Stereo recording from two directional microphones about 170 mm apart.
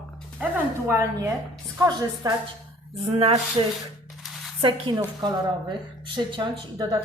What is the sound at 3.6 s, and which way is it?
A woman's voice, 30° right (ahead or behind).